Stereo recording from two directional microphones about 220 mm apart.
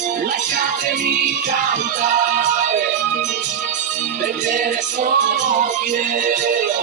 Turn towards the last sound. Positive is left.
turn(degrees=-35)  # may be behind; listen again after turning